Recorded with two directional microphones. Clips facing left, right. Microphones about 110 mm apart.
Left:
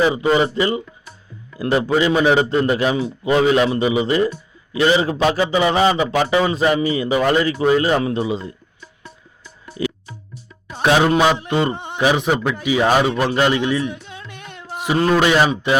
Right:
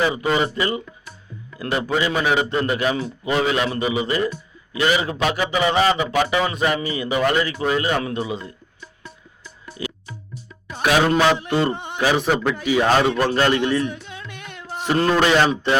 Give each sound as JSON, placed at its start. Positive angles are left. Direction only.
{"t": 0.0, "sound": "a man's voice", "side_deg": 25}
{"t": 9.8, "sound": "music", "side_deg": 25}
{"t": 10.7, "sound": "a man's voice", "side_deg": 25}
{"t": 11.0, "sound": "a man's voice", "side_deg": 15}
{"t": 14.1, "sound": "music", "side_deg": 30}
{"t": 14.7, "sound": "a man's voice", "side_deg": 10}